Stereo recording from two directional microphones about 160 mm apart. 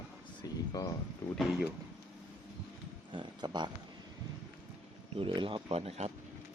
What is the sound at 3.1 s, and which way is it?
Speech, 30° right (ahead or behind).